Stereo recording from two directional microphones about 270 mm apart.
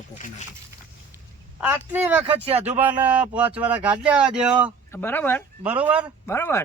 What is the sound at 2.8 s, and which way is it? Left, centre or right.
Speech, centre.